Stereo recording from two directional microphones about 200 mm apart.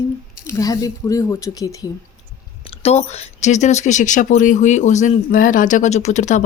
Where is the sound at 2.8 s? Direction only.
35° left (ahead or behind).